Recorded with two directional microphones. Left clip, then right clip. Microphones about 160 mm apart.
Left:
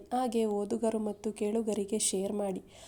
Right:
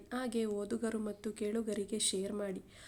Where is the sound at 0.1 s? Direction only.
15° left (ahead or behind).